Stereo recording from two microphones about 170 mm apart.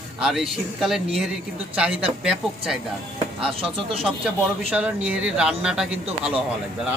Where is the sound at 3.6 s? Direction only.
35° right (ahead or behind).